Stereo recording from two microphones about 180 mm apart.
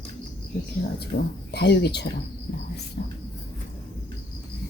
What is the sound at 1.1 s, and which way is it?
Speech, 60° left (ahead or behind).